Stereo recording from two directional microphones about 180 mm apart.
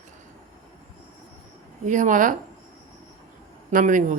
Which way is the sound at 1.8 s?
45° right (ahead or behind).